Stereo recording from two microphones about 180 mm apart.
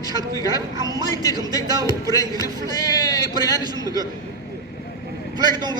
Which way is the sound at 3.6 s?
20° right (ahead or behind).